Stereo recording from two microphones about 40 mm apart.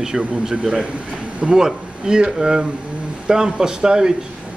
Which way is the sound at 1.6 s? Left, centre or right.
Centre.